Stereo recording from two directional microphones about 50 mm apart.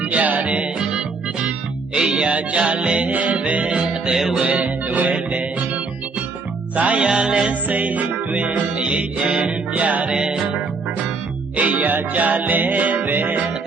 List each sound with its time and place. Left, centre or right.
0.0 s music: right
4.1 s music: centre
4.4 s music: right
7.7 s music: right; by 9.8 s centre
9.8 s music: right
10.2 s music: centre
11.5 s music: right